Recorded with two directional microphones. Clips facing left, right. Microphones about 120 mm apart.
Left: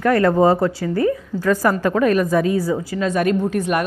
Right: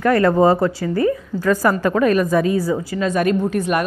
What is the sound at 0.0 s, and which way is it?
A woman's voice, 25° right (ahead or behind).